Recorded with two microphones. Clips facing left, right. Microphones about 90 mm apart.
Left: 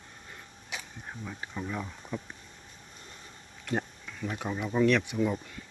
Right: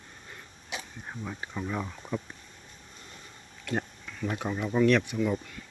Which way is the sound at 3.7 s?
5° left (ahead or behind).